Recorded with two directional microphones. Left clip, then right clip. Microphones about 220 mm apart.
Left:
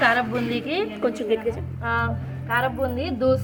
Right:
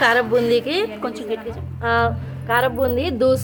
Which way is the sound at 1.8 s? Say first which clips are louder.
Right 9 dB; 45° right (ahead or behind).